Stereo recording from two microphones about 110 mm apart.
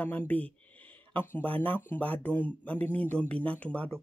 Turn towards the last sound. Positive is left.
turn(degrees=10)  # may be behind; listen again after turning